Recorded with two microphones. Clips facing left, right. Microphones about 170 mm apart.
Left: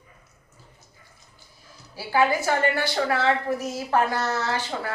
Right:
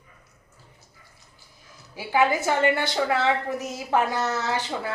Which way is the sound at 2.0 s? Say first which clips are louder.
Even; 20° right (ahead or behind).